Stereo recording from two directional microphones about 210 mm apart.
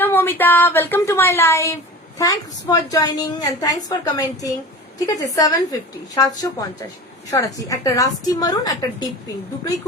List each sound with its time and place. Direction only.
0.0 s a woman's voice: 10° left (ahead or behind)